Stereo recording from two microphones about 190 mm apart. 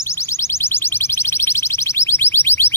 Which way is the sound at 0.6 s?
10° left (ahead or behind).